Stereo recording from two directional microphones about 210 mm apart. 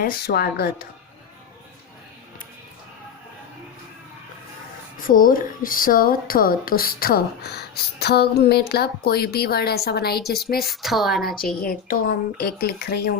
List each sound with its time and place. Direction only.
0.0 s speech: 50° left (ahead or behind)
4.9 s speech: 40° left (ahead or behind)
10.7 s a woman's voice: centre (ahead or behind)
11.6 s speech: 45° left (ahead or behind)